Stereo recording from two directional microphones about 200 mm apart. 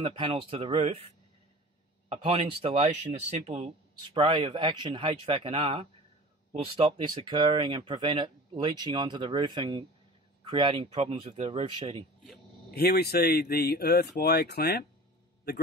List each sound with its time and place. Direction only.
0.0 s speech: 25° right (ahead or behind)
2.0 s speech: 30° right (ahead or behind)
12.7 s speech: 50° left (ahead or behind)